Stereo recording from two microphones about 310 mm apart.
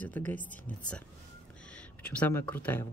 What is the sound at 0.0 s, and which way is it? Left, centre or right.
Speech, centre.